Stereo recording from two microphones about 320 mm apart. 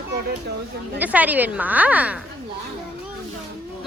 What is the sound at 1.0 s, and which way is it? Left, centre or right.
A woman's voice, centre.